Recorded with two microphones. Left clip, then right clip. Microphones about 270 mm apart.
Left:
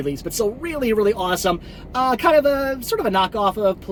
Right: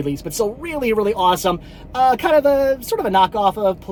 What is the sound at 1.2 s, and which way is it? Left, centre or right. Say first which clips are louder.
Speech: right 4 dB; centre.